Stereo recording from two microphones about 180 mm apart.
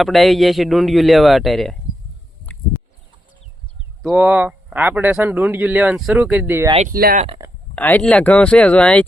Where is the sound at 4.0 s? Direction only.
5° right (ahead or behind).